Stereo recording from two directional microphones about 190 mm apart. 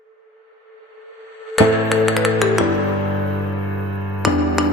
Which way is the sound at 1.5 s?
Centre (ahead or behind).